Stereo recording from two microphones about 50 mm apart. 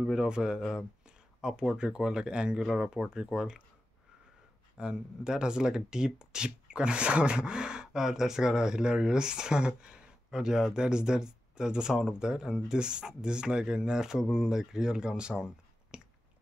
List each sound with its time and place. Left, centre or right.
0.0 s speech: centre
4.7 s speech: centre
15.9 s a sound: centre